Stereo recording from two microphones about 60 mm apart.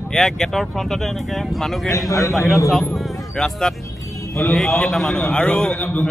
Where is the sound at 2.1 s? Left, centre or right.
Left.